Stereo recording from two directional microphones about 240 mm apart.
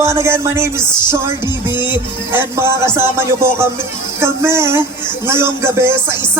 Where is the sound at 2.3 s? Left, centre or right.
Centre.